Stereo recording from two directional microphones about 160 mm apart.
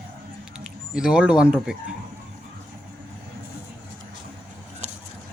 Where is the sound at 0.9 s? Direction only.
5° right (ahead or behind).